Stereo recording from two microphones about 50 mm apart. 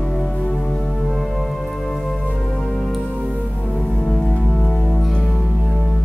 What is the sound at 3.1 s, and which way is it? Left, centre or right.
Music, right.